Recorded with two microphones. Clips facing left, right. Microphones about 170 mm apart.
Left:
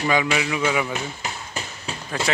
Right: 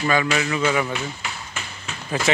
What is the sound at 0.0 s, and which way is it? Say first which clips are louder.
Speech: even; 15° left (ahead or behind).